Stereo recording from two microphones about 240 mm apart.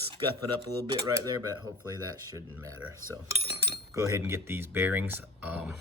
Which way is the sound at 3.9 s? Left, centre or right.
Centre.